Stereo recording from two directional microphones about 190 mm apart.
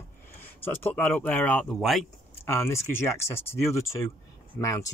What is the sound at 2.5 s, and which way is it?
Speech, 15° left (ahead or behind).